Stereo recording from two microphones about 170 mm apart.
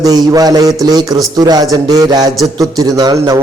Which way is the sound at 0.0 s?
20° right (ahead or behind).